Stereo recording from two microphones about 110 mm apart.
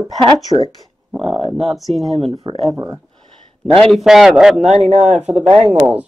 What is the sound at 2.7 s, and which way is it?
Speech, 30° right (ahead or behind).